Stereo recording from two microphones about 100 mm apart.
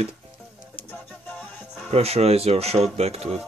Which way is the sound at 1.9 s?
90° right.